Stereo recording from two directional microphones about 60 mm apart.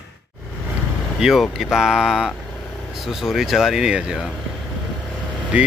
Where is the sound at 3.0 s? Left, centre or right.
Centre.